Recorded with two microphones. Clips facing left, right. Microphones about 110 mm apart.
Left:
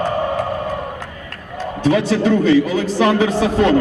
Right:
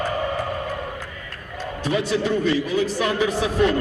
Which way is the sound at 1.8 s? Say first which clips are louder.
Left 7 dB; 75° left (ahead or behind).